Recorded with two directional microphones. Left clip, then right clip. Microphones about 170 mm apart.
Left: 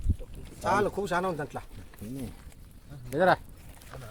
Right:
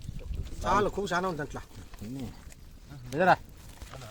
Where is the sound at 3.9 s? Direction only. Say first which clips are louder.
Left 1 dB; 80° left.